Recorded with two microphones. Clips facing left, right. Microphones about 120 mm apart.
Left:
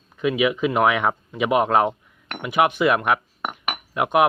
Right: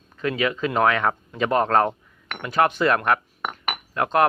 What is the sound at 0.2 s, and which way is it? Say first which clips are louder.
Speech: left 3 dB; 15° left (ahead or behind).